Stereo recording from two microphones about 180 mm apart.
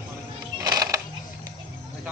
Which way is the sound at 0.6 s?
20° right (ahead or behind).